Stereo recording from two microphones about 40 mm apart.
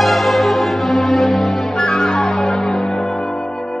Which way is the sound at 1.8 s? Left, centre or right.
Centre.